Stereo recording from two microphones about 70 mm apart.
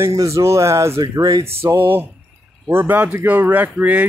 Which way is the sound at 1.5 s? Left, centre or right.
Right.